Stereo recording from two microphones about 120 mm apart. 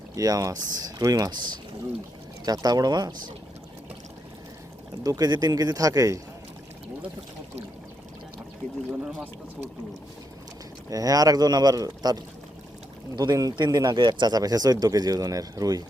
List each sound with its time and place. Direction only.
0.2 s speech: 30° right (ahead or behind)
5.0 s speech: 30° right (ahead or behind)
8.9 s speech: 15° right (ahead or behind)
10.8 s speech: 30° right (ahead or behind)